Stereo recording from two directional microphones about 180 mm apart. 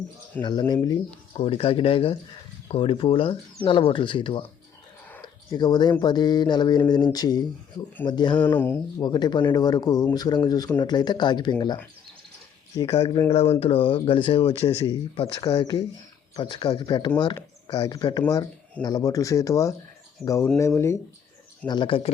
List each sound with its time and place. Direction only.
0.4 s speech: 10° left (ahead or behind)
0.7 s speech: 25° left (ahead or behind)
5.2 s a sound: 25° left (ahead or behind)
6.0 s speech: 25° left (ahead or behind)
8.4 s speech: 10° left (ahead or behind)
9.0 s speech: 25° left (ahead or behind)
13.3 s speech: 35° left (ahead or behind); by 21.0 s 15° left (ahead or behind)
21.7 s speech: 25° left (ahead or behind)